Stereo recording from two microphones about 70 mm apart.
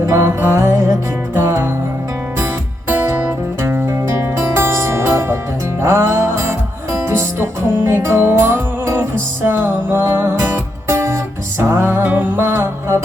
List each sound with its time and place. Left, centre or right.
0.0 s music: right
3.6 s music: right